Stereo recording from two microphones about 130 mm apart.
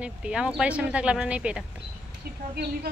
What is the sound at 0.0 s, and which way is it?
Speech, 5° right (ahead or behind).